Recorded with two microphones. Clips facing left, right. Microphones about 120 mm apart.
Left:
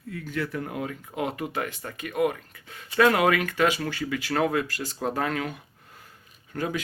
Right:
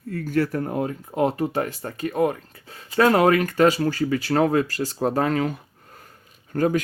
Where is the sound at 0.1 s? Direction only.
45° right (ahead or behind).